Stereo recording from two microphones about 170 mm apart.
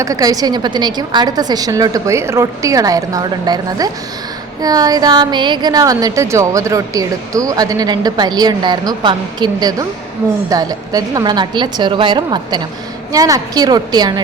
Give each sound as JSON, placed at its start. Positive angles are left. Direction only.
{"t": 0.0, "sound": "speech", "side_deg": -20}